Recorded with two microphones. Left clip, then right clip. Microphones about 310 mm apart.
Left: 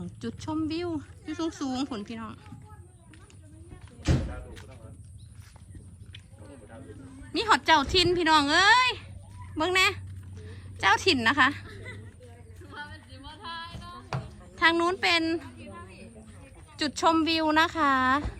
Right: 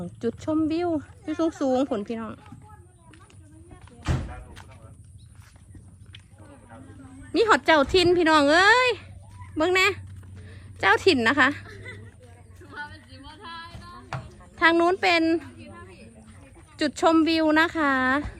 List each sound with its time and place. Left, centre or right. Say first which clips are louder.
0.0 s speech: right 9 dB; centre
7.3 s speech: right 3 dB; centre
10.4 s a sound: right 3 dB; centre
13.1 s female singing: left 2 dB; centre
14.5 s speech: right 4 dB; centre
15.7 s a sound: even; left
16.7 s speech: right 4 dB; centre